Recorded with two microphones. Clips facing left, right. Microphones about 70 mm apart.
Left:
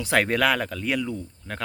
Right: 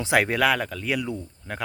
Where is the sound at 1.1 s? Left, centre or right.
Centre.